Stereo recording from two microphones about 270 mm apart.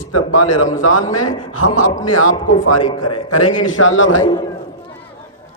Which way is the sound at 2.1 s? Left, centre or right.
Left.